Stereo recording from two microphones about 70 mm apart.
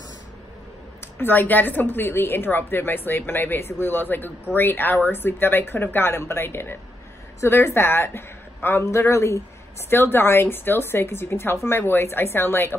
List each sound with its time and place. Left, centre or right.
1.0 s a woman's voice: left